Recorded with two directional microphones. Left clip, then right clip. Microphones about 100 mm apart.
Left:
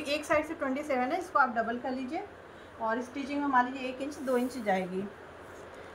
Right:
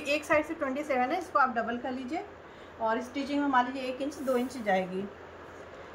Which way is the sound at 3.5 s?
45° right (ahead or behind).